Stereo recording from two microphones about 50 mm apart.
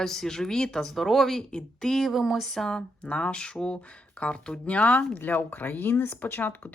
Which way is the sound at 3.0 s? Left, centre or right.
Left.